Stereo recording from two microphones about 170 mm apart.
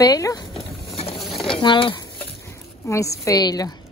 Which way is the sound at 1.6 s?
30° left (ahead or behind).